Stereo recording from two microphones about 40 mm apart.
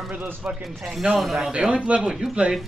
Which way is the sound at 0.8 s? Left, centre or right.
Centre.